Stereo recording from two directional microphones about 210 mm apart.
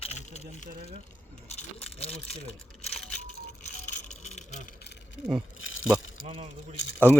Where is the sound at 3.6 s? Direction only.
35° left (ahead or behind).